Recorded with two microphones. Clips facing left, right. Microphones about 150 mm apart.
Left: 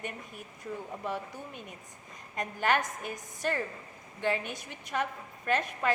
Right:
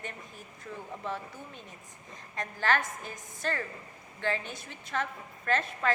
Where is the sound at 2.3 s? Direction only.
15° left (ahead or behind).